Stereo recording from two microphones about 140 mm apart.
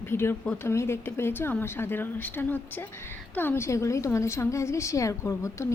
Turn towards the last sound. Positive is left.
turn(degrees=20)  # may be behind; listen again after turning